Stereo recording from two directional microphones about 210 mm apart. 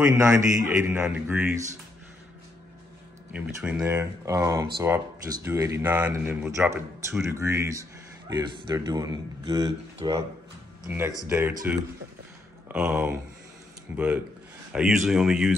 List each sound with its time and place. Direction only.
0.0 s speech: 5° right (ahead or behind)
3.3 s speech: 10° right (ahead or behind)
11.2 s speech: 10° right (ahead or behind)